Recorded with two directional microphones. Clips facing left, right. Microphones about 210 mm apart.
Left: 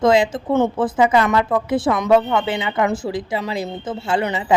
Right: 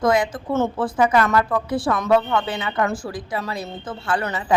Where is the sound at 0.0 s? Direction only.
25° left (ahead or behind).